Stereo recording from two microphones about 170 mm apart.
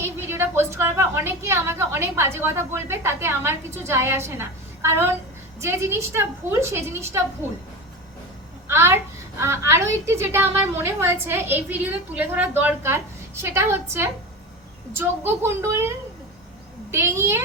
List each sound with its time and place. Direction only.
0.0 s a woman's voice: 15° right (ahead or behind)
8.6 s a woman's voice: 15° right (ahead or behind)
16.9 s a woman's voice: 15° right (ahead or behind)